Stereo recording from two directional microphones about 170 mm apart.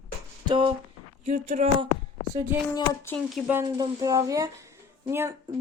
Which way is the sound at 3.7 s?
25° right (ahead or behind).